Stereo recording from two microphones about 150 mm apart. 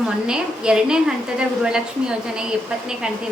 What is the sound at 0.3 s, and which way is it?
A woman's voice, 5° right (ahead or behind).